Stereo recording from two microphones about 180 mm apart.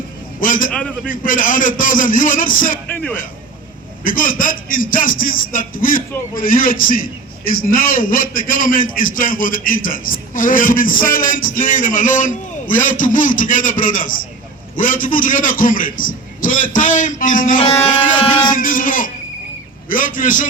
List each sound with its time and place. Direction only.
0.3 s a man's voice: 50° left (ahead or behind)
0.7 s a man's voice: 5° left (ahead or behind)
1.0 s a man's voice: 50° left (ahead or behind)
2.9 s a man's voice: 10° left (ahead or behind)
4.0 s a man's voice: 50° left (ahead or behind)